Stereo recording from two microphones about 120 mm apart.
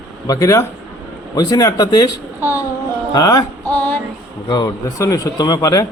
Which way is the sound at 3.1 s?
30° left (ahead or behind).